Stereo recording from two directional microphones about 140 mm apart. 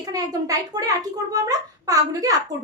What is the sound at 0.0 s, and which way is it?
A child's voice, 25° right (ahead or behind).